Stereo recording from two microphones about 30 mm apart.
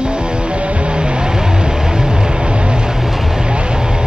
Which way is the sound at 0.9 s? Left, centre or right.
Right.